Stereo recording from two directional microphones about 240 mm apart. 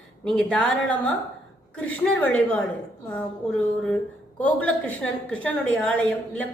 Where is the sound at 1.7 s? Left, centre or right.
Centre.